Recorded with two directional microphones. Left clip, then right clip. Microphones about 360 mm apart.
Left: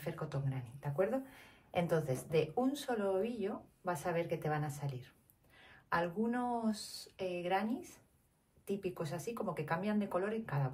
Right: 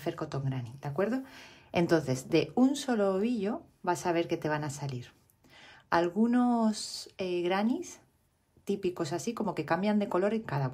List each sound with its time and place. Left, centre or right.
0.0 s speech: right
8.6 s speech: right